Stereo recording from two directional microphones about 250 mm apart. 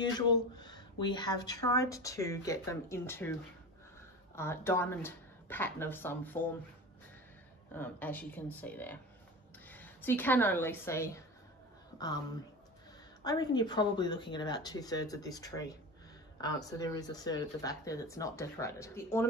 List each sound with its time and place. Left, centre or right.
0.0 s speech: centre
4.4 s speech: centre
7.7 s a woman's voice: centre
13.2 s speech: centre